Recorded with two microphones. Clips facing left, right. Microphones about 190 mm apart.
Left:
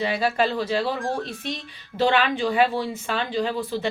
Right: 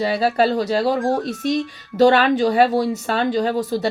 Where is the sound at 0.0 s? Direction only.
35° right (ahead or behind).